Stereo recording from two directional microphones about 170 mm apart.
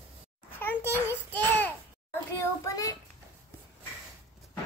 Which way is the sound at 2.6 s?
20° left (ahead or behind).